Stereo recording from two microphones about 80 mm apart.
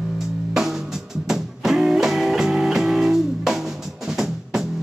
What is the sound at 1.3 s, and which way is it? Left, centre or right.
Music, centre.